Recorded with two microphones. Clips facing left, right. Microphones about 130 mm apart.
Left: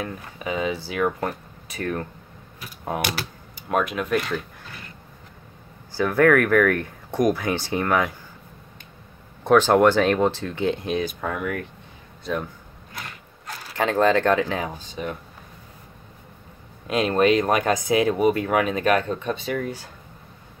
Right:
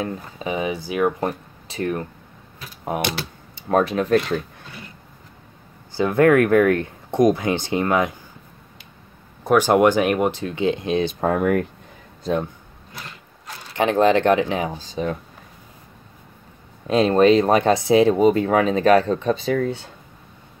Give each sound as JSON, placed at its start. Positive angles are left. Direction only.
{"t": 0.0, "sound": "speech", "side_deg": -25}
{"t": 5.9, "sound": "speech", "side_deg": -20}
{"t": 9.4, "sound": "speech", "side_deg": -5}
{"t": 9.7, "sound": "speech", "side_deg": -15}
{"t": 11.1, "sound": "speech", "side_deg": -40}
{"t": 13.7, "sound": "speech", "side_deg": -20}
{"t": 14.8, "sound": "speech", "side_deg": -35}
{"t": 16.8, "sound": "speech", "side_deg": -30}